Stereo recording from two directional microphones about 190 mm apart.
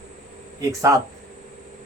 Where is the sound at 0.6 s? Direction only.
15° right (ahead or behind).